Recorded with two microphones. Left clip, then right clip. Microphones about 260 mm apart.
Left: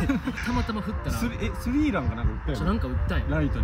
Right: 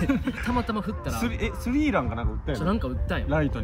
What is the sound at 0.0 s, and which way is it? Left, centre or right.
Speech, centre.